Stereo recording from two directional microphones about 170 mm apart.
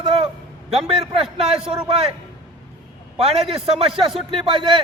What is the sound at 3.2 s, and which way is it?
A man's voice, 35° right (ahead or behind).